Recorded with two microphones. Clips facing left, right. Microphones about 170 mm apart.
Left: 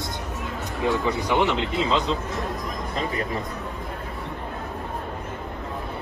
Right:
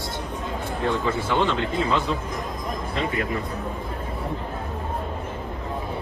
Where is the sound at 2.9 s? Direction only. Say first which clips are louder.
Right 1 dB; 35° left (ahead or behind).